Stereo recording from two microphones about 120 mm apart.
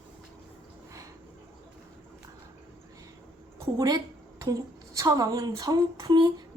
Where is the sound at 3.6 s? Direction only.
30° right (ahead or behind).